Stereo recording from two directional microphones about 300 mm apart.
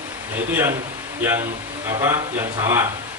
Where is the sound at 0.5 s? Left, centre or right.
Centre.